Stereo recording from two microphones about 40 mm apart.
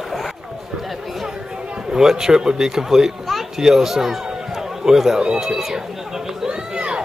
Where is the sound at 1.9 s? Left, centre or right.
Centre.